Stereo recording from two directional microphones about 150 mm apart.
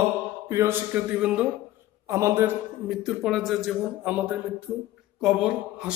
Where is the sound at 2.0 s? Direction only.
20° right (ahead or behind).